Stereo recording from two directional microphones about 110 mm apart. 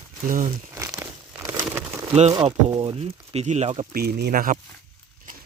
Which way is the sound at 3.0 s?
75° right (ahead or behind).